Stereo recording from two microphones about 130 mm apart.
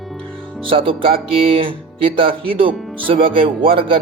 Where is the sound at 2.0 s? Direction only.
45° right (ahead or behind).